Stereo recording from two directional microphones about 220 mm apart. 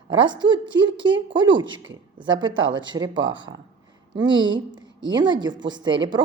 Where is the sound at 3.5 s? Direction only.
50° right (ahead or behind).